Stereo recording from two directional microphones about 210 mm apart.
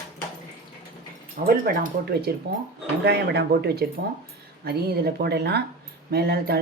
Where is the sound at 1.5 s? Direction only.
40° right (ahead or behind).